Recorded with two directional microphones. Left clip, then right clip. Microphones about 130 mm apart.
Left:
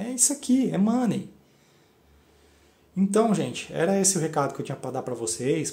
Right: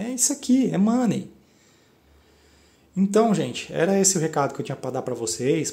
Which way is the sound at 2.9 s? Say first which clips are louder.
Right 3 dB; 20° right (ahead or behind).